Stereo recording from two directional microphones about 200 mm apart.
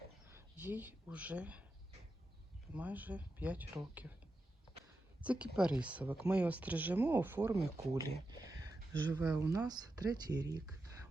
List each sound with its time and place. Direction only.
0.3 s speech: 10° right (ahead or behind)
2.7 s speech: 10° right (ahead or behind)
5.2 s speech: 5° right (ahead or behind)